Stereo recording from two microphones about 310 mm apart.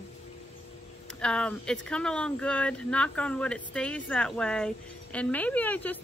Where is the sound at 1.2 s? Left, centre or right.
Centre.